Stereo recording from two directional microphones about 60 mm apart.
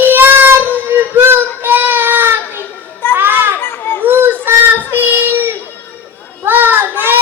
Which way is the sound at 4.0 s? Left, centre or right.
Right.